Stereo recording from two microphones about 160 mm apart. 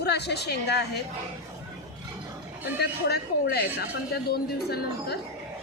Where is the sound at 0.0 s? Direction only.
90° left.